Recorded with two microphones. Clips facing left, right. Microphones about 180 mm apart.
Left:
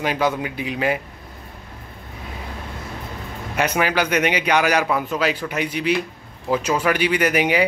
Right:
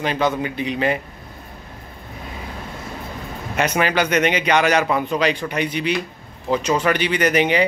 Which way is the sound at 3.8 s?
10° left (ahead or behind).